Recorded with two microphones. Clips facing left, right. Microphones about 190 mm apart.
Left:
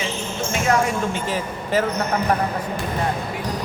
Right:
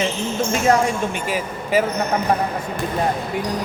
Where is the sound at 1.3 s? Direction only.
10° right (ahead or behind).